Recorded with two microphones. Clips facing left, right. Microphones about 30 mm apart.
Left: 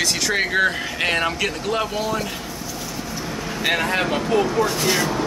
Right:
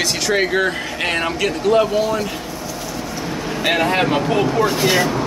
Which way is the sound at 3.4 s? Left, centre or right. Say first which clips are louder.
Right 4 dB; centre.